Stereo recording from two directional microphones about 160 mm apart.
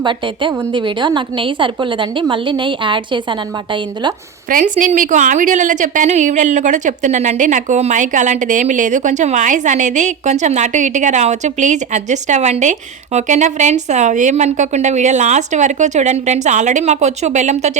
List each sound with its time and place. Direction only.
0.0 s a woman's voice: 30° right (ahead or behind)
4.4 s a woman's voice: 55° right (ahead or behind)